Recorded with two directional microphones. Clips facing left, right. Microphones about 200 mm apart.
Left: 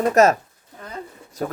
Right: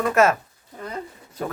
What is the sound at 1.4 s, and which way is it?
Speech, 40° left (ahead or behind).